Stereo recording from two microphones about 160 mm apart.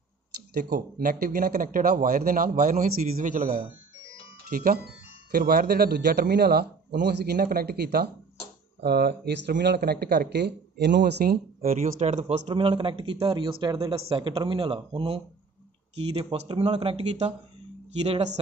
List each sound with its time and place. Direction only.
0.6 s a man's voice: 70° right (ahead or behind)
8.8 s speech: 90° right; by 12.4 s 45° right (ahead or behind)
12.4 s a man's voice: 35° right (ahead or behind)